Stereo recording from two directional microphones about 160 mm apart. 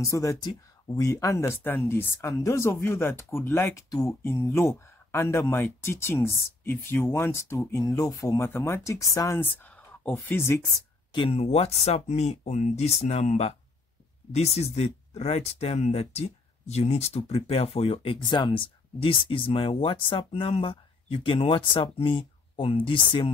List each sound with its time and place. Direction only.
0.0 s speech: 20° left (ahead or behind)
11.1 s speech: 35° left (ahead or behind)